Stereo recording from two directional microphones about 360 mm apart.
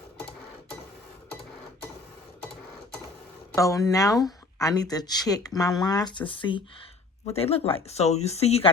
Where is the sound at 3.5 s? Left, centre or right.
Centre.